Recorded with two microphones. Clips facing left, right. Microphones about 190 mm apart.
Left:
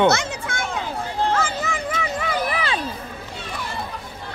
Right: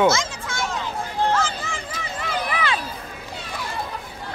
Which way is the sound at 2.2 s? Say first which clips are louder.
Right 2 dB; 40° left (ahead or behind).